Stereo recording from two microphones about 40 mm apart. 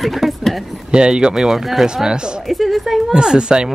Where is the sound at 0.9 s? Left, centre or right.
Right.